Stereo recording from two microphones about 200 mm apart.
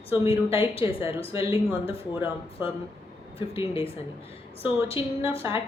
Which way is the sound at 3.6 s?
25° left (ahead or behind).